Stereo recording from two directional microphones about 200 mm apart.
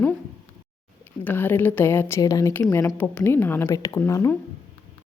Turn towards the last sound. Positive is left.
turn(degrees=15)  # may be behind; listen again after turning